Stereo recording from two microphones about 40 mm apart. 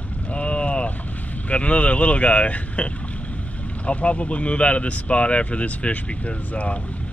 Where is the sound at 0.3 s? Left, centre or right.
Left.